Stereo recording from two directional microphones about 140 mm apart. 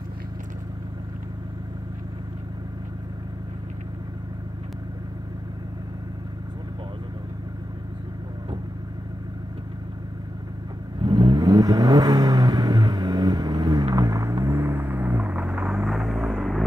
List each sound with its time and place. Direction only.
11.0 s vehicle: 30° right (ahead or behind); by 16.6 s centre (ahead or behind)